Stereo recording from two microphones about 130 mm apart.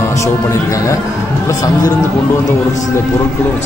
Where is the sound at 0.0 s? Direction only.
25° left (ahead or behind).